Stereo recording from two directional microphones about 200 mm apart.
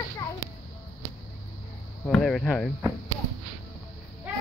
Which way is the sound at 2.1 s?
Centre (ahead or behind).